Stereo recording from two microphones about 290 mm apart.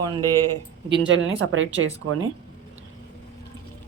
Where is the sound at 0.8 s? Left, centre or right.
Right.